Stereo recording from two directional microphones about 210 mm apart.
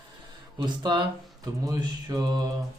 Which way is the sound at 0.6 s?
20° right (ahead or behind).